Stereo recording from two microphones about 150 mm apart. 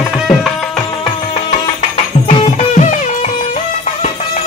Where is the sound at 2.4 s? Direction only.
55° left (ahead or behind).